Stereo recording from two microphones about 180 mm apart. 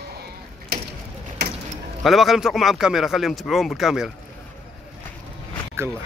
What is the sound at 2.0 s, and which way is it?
Speech, centre (ahead or behind).